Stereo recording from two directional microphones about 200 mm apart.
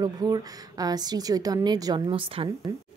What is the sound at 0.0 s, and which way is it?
A woman's voice, 20° right (ahead or behind).